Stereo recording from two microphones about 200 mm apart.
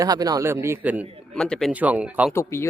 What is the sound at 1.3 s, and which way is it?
Speech, 5° left (ahead or behind).